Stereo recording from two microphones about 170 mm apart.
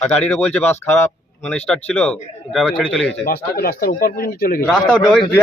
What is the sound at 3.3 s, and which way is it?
Speech, 65° left (ahead or behind).